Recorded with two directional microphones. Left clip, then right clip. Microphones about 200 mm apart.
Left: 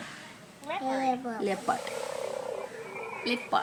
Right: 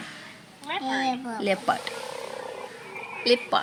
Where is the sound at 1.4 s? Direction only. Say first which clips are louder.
Right 5 dB; 35° right (ahead or behind).